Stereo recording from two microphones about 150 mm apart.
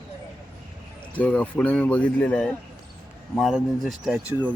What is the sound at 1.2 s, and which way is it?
A man's voice, 10° left (ahead or behind).